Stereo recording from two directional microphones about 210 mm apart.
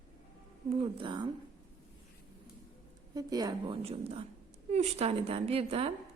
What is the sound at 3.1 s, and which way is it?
A woman's voice, 20° right (ahead or behind).